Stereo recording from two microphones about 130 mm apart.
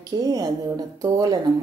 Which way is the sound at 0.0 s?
30° right (ahead or behind).